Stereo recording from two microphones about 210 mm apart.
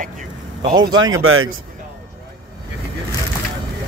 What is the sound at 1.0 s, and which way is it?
Speech, 75° right (ahead or behind).